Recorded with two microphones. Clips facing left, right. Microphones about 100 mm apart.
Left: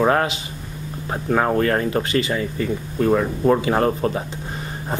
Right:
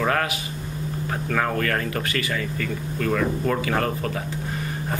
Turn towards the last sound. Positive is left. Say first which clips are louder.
# left 5 dB
turn(degrees=25)  # may be behind; listen again after turning